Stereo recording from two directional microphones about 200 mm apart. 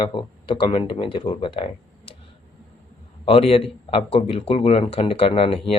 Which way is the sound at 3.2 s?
25° left (ahead or behind).